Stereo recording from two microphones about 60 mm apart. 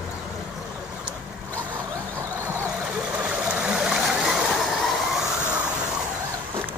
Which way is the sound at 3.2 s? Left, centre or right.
Centre.